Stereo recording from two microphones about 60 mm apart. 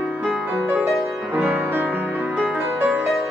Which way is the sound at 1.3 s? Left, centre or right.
Right.